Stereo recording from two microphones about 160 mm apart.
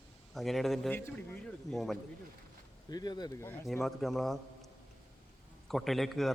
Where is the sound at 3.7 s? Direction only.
Centre (ahead or behind).